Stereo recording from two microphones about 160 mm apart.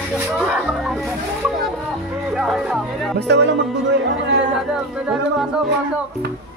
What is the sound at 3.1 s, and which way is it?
Speech, 90° right.